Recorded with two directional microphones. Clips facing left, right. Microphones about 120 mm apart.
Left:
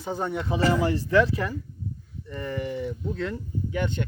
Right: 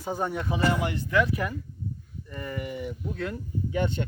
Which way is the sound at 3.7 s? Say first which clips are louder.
Right 1 dB; 20° right (ahead or behind).